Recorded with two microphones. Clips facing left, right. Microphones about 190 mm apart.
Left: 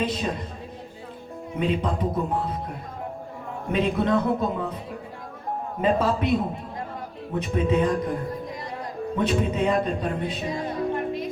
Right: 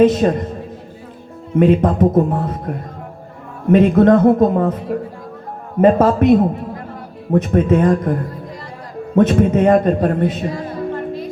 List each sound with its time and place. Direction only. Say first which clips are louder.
0.0 s speech: right 14 dB; 50° right (ahead or behind)
1.5 s a man's voice: right 12 dB; 50° right (ahead or behind)
10.5 s music: right 3 dB; 20° left (ahead or behind)